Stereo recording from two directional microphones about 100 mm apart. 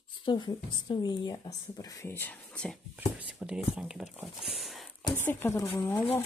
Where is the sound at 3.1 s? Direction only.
10° right (ahead or behind).